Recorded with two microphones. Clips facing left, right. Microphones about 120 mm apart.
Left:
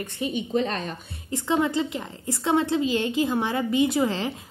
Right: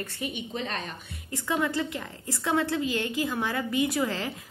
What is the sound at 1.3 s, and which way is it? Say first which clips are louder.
A woman's voice: left 5 dB; 20° left (ahead or behind).